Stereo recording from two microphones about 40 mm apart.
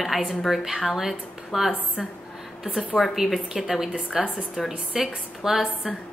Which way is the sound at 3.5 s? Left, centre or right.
Centre.